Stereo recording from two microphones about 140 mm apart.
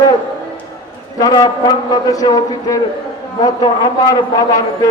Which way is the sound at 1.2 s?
30° left (ahead or behind).